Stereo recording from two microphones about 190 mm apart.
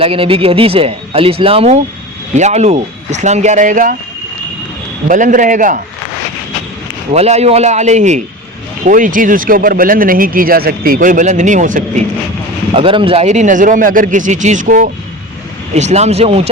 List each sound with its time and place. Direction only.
0.0 s a man's voice: 30° right (ahead or behind)
5.0 s speech: 45° right (ahead or behind)
7.1 s a man's voice: 35° right (ahead or behind)
12.7 s a man's voice: 25° right (ahead or behind)